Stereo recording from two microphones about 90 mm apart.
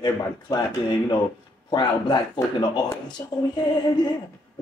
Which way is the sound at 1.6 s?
60° left (ahead or behind).